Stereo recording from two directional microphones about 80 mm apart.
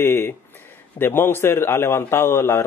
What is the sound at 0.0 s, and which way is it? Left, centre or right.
Speech, left.